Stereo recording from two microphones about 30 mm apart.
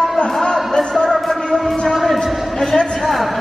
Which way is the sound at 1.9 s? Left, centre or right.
Centre.